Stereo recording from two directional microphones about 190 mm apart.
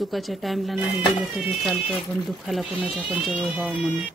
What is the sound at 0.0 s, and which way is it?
Speech, centre (ahead or behind).